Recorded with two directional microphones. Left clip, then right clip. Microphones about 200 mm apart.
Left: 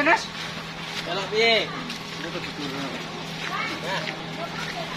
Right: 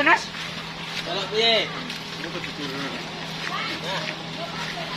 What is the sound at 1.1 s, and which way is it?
Speech, 10° right (ahead or behind).